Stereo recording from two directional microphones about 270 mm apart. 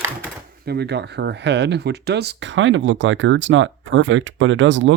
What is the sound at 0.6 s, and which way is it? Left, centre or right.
Speech, right.